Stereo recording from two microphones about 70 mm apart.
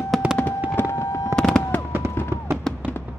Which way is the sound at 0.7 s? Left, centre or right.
Left.